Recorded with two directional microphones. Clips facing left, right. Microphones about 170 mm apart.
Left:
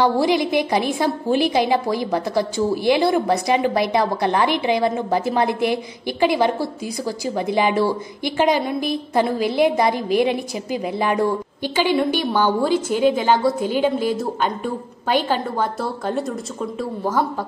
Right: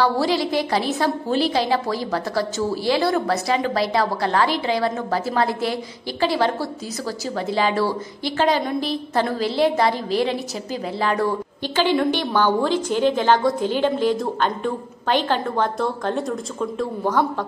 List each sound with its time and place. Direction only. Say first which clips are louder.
0.0 s a woman's voice: left 2 dB; 20° left (ahead or behind)